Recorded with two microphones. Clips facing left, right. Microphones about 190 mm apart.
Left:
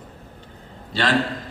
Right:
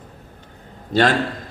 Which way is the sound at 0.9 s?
45° right (ahead or behind).